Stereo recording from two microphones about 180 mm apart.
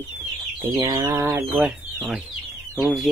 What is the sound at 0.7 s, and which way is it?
Chicken, 20° right (ahead or behind).